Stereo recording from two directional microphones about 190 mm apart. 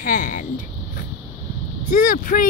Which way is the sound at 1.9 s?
45° left (ahead or behind).